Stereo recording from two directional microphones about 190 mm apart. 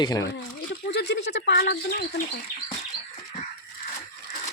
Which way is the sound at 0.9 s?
65° left (ahead or behind).